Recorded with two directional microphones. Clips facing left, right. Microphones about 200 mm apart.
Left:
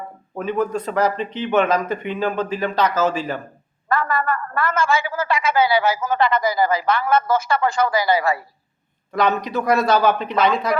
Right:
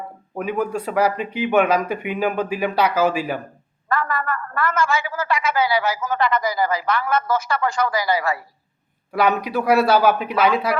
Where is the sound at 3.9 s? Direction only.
30° left (ahead or behind).